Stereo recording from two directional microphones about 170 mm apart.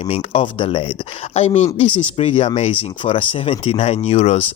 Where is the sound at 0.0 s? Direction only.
40° left (ahead or behind).